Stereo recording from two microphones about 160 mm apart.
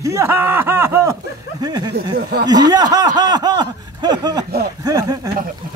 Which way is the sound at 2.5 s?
25° right (ahead or behind).